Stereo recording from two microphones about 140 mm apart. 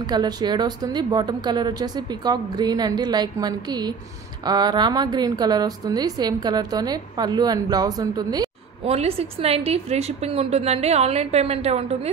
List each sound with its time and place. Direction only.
0.0 s a woman's voice: 30° right (ahead or behind)
8.8 s a woman's voice: 45° right (ahead or behind)